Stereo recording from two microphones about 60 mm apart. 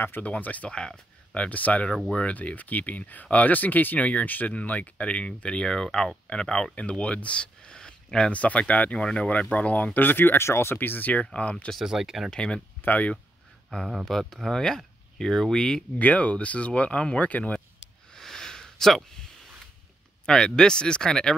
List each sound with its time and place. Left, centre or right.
0.0 s speech: left
0.7 s speech: centre
9.9 s speech: left; by 11.5 s centre
11.8 s speech: centre
12.3 s speech: centre
12.8 s speech: left
14.0 s speech: centre
16.0 s speech: left
18.1 s a sound: centre
20.2 s speech: centre